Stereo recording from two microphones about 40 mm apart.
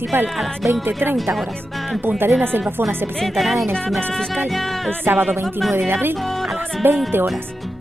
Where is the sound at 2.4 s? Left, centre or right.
Right.